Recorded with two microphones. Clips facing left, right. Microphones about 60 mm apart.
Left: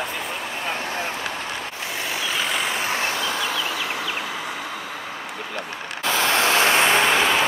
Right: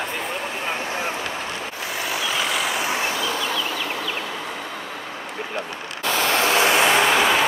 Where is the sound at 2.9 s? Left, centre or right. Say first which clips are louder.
Even; centre.